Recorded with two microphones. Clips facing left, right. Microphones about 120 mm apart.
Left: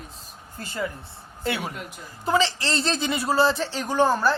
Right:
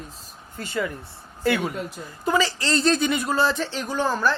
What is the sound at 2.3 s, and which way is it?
Speech, 25° left (ahead or behind).